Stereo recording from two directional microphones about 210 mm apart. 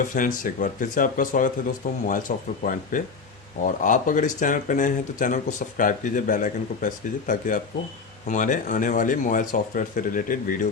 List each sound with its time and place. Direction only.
0.1 s speech: 40° left (ahead or behind)